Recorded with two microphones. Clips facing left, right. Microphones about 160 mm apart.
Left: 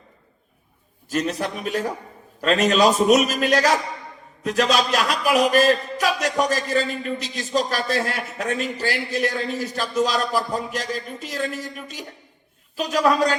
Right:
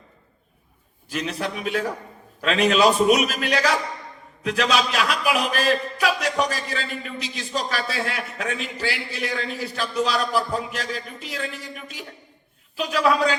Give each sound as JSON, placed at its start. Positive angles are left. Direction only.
{"t": 1.1, "sound": "a man's voice", "side_deg": 40}